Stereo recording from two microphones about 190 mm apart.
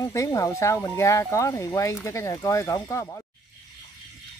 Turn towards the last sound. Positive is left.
turn(degrees=15)  # may be behind; listen again after turning